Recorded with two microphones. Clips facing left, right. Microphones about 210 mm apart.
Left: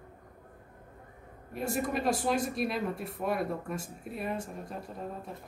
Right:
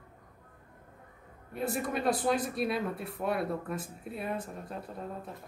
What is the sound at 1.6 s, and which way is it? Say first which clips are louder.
Speech: even; centre (ahead or behind).